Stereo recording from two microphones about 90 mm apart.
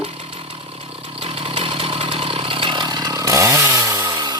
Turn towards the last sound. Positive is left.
turn(degrees=-55)  # may be behind; listen again after turning